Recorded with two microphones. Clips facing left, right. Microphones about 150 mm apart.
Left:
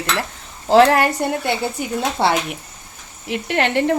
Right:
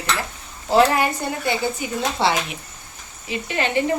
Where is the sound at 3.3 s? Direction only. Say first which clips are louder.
Left 3 dB; 70° left (ahead or behind).